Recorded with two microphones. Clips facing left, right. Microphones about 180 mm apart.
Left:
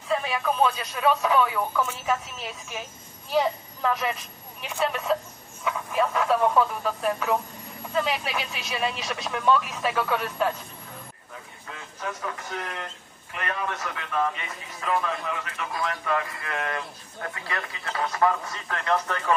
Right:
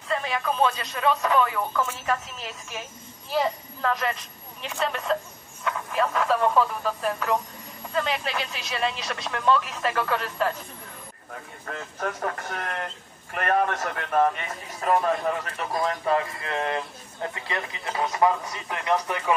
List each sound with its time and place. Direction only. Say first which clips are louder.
0.1 s a woman's voice: left 1 dB; 5° left (ahead or behind)
11.6 s a man's voice: right 4 dB; 55° right (ahead or behind); by 19.3 s 15° right (ahead or behind)